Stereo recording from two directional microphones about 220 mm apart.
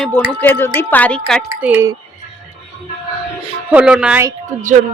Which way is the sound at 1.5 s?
10° right (ahead or behind).